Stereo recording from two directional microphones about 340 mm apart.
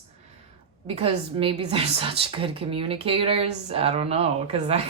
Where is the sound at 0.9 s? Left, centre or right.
Centre.